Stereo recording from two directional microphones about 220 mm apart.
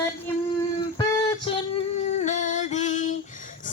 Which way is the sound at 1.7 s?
30° left (ahead or behind).